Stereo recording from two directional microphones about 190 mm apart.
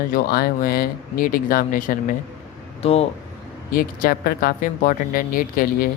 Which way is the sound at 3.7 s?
50° left (ahead or behind).